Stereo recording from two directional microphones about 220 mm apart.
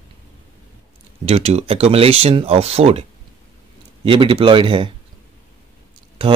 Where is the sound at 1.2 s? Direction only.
30° right (ahead or behind).